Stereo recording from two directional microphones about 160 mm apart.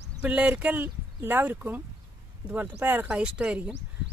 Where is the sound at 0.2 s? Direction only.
10° right (ahead or behind).